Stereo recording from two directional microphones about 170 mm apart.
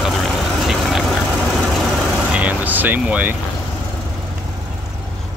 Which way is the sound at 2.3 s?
10° right (ahead or behind).